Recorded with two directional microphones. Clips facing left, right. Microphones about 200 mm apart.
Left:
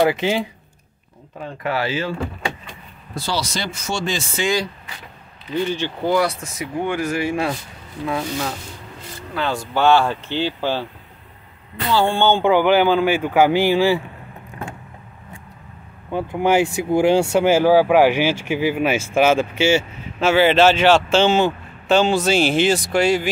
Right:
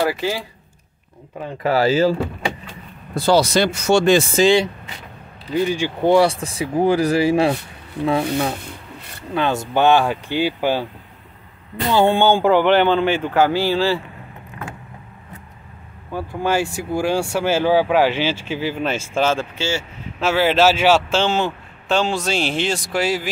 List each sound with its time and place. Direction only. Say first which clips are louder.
0.0 s speech: left 3 dB; 20° left (ahead or behind)
1.6 s speech: right 7 dB; 35° right (ahead or behind)
3.2 s speech: right 10 dB; 55° right (ahead or behind)
4.4 s speech: right 3 dB; 30° right (ahead or behind)
5.5 s speech: right 3 dB; 10° right (ahead or behind)
6.0 s speech: right 5 dB; 30° right (ahead or behind)
8.2 s speech: right 5 dB; 60° right (ahead or behind)
9.3 s speech: right 3 dB; 20° right (ahead or behind)
11.9 s speech: right 2 dB; 20° right (ahead or behind)
12.4 s speech: left 1 dB; 5° left (ahead or behind)
16.1 s speech: left 3 dB; 20° left (ahead or behind)
20.2 s speech: left 2 dB; centre (ahead or behind)